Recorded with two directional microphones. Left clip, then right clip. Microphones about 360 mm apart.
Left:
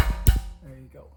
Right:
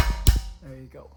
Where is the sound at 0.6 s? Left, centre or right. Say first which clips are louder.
Right 4 dB; centre.